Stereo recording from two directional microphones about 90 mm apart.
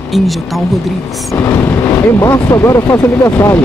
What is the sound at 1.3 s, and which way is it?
Speech, 30° left (ahead or behind).